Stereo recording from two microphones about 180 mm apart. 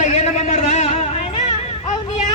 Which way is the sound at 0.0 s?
40° left (ahead or behind).